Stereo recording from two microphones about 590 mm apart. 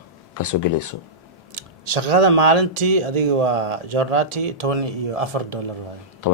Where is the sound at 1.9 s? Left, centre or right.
Right.